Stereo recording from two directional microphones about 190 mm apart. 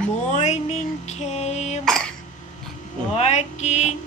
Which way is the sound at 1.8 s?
Centre (ahead or behind).